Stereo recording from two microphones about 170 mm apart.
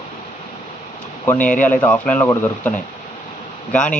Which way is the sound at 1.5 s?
50° left (ahead or behind).